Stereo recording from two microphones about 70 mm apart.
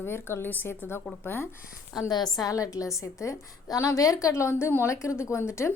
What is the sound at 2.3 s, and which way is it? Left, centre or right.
A woman's voice, left.